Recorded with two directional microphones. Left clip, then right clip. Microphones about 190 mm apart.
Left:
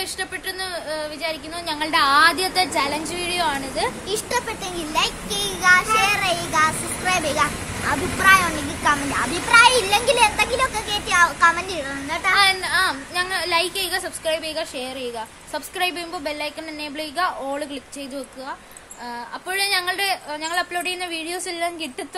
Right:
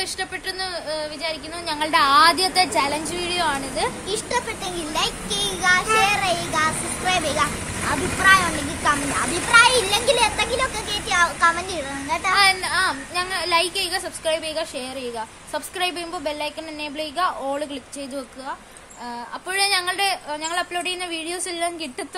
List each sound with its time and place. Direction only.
0.0 s a woman's voice: centre (ahead or behind)
4.1 s a child's voice: 15° left (ahead or behind)
12.4 s a woman's voice: centre (ahead or behind)
19.5 s a woman's voice: centre (ahead or behind)